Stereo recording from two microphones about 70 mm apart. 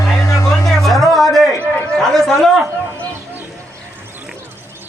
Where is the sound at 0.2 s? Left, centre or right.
Left.